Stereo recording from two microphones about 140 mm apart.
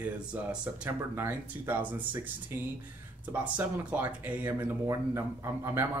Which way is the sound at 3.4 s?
10° right (ahead or behind).